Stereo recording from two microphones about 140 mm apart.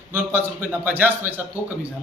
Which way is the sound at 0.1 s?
15° right (ahead or behind).